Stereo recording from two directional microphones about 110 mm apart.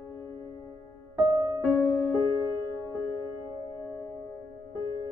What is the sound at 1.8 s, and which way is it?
Music, 20° left (ahead or behind).